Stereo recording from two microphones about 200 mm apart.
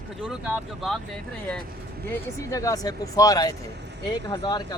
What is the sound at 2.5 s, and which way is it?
Speech, 15° left (ahead or behind).